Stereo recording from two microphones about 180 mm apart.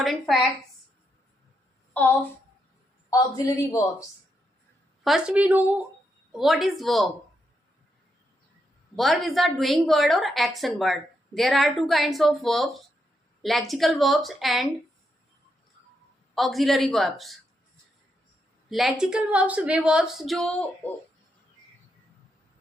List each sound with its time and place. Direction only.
0.0 s a woman's voice: centre (ahead or behind)
1.9 s a sound: 10° left (ahead or behind)
3.1 s a man's voice: 20° left (ahead or behind)
5.0 s a woman's voice: 5° right (ahead or behind)
9.0 s a woman's voice: centre (ahead or behind)
16.3 s a woman's voice: centre (ahead or behind)
18.7 s a woman's voice: centre (ahead or behind)